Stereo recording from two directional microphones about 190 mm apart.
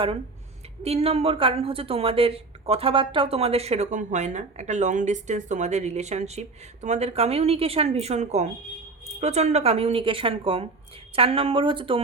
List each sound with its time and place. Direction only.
0.8 s a woman's voice: 30° right (ahead or behind)